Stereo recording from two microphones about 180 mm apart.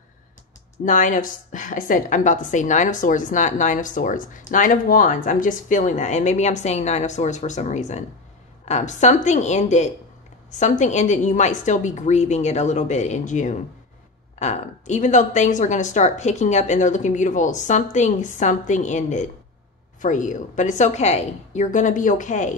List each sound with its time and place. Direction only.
0.8 s a woman's voice: 45° left (ahead or behind)